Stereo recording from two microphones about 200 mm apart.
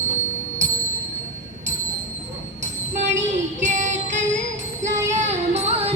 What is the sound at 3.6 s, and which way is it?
Music, 35° right (ahead or behind).